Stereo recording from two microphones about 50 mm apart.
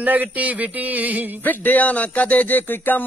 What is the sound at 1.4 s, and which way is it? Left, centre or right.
Speech, left.